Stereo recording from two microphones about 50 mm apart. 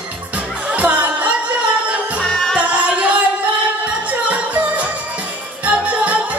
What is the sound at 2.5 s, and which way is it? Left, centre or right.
Music, right.